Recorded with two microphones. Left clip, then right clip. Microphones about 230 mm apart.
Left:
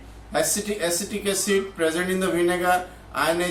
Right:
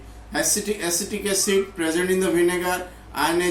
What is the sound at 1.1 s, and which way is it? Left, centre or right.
A man's voice, centre.